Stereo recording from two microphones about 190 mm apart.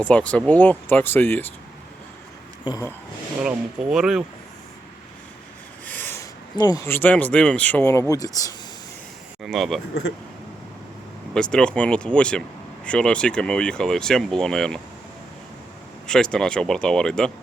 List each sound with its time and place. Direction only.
0.0 s speech: 5° left (ahead or behind)
2.6 s speech: 20° left (ahead or behind)
3.4 s speech: 5° right (ahead or behind)
5.8 s speech: 10° left (ahead or behind)
9.4 s speech: centre (ahead or behind)
11.3 s speech: 5° left (ahead or behind)
16.0 s speech: 5° left (ahead or behind)